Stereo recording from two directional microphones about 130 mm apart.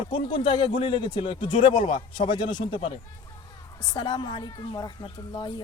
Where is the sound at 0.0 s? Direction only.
40° left (ahead or behind).